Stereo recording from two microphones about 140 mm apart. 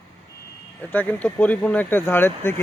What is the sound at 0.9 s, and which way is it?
Speech, 10° left (ahead or behind).